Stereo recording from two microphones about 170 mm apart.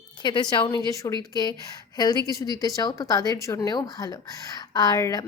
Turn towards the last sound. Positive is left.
turn(degrees=20)  # may be behind; listen again after turning